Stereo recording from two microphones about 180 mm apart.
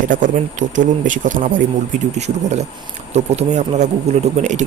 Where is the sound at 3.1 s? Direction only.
35° right (ahead or behind).